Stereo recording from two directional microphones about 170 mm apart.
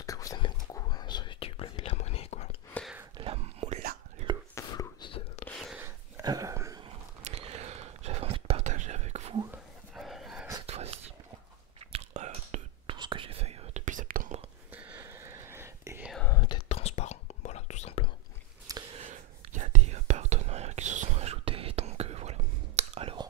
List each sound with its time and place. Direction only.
0.0 s whispering: 20° left (ahead or behind); by 2.5 s 40° left (ahead or behind)
3.6 s whispering: 40° right (ahead or behind)
4.6 s whispering: 20° left (ahead or behind)
5.5 s whispering: centre (ahead or behind)
5.8 s a sound: 20° right (ahead or behind)
7.2 s whispering: 35° right (ahead or behind)
9.9 s a sound: centre (ahead or behind)
10.7 s whispering: 35° right (ahead or behind)
12.9 s whispering: 30° right (ahead or behind); by 14.4 s 55° right (ahead or behind)
14.7 s whispering: 15° right (ahead or behind)
16.3 s whispering: 25° left (ahead or behind)
16.6 s whispering: 40° left (ahead or behind)
18.9 s whispering: 45° right (ahead or behind)